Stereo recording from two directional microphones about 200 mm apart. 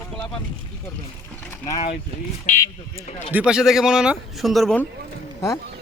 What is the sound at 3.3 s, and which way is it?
A man's voice, 5° right (ahead or behind).